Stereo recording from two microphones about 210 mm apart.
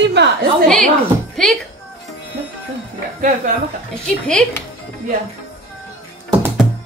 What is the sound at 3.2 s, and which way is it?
Speech, 40° right (ahead or behind).